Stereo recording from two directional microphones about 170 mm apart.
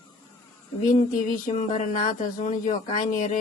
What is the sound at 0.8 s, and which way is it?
Speech, 50° left (ahead or behind).